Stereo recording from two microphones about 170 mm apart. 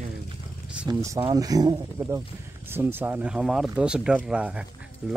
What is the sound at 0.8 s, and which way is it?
Speech, 20° right (ahead or behind).